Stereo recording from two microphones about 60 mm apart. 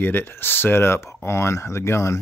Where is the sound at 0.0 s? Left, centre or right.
Left.